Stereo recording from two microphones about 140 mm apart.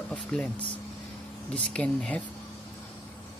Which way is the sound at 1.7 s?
10° left (ahead or behind).